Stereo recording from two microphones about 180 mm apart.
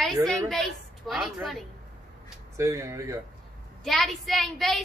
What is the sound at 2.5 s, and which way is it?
Music, 15° right (ahead or behind).